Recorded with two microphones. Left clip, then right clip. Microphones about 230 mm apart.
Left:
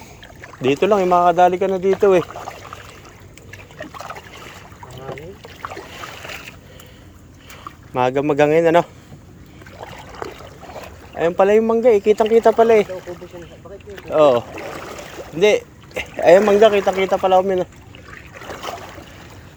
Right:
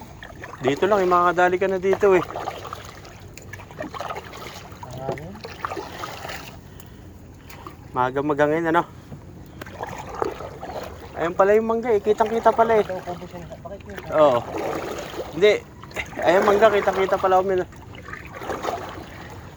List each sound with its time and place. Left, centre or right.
0.6 s speech: left
2.2 s a sound: right
3.8 s water: right
7.9 s speech: left
9.8 s trickle: right
11.2 s speech: left
14.1 s speech: left
14.5 s a sound: right
15.4 s boat: left
16.5 s speech: left
18.3 s a sound: right